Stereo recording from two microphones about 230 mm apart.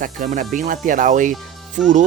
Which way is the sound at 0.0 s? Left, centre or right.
Right.